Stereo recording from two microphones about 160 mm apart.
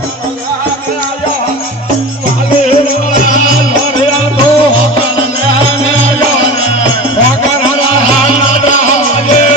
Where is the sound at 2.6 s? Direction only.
45° left (ahead or behind).